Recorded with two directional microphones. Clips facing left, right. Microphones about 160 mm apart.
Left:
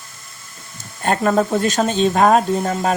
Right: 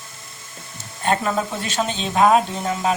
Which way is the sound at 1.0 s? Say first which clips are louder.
Left 4 dB; 45° left (ahead or behind).